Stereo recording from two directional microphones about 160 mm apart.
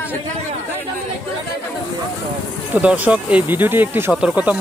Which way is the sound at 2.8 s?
10° right (ahead or behind).